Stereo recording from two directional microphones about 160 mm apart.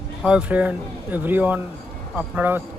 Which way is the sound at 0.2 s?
5° right (ahead or behind).